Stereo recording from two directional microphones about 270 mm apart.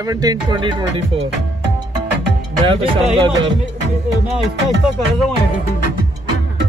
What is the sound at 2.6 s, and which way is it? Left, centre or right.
Music, centre.